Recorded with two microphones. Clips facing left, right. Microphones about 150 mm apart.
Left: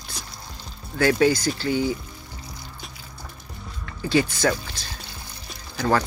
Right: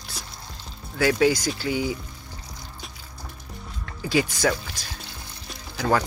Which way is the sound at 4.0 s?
10° right (ahead or behind).